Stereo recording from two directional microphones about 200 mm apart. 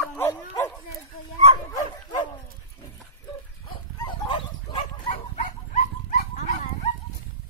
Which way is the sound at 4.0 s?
25° left (ahead or behind).